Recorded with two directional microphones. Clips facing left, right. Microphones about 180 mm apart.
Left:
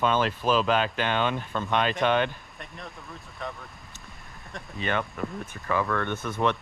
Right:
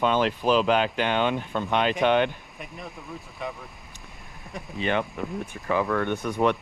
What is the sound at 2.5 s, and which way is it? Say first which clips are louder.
Speech: right 3 dB; 5° right (ahead or behind).